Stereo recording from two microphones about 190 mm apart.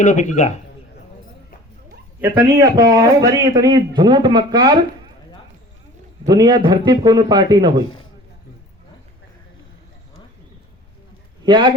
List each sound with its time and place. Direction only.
0.0 s a man's voice: 40° left (ahead or behind)
2.2 s a man's voice: 20° right (ahead or behind)
6.2 s a man's voice: 20° right (ahead or behind)
11.4 s speech: 25° right (ahead or behind)